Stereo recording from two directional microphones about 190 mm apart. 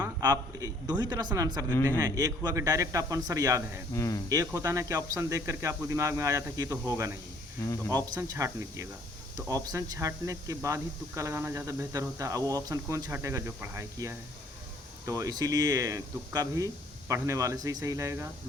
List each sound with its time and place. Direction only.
0.0 s a man's voice: 20° right (ahead or behind)
3.9 s speech: 15° left (ahead or behind)
4.3 s speech: 15° right (ahead or behind)